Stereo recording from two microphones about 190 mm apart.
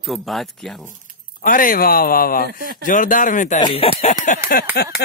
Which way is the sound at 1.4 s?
45° left (ahead or behind).